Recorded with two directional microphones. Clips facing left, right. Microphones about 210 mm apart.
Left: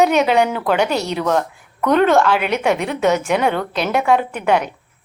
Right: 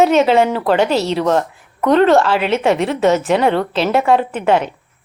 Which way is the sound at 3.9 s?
Centre (ahead or behind).